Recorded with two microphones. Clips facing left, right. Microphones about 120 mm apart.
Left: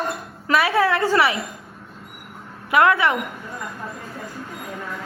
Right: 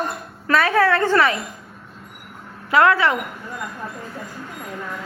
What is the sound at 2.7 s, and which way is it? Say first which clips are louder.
Speech: right 1 dB; 20° left (ahead or behind).